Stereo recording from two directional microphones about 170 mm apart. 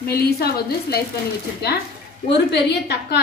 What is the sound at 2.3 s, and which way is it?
Speech, 85° left.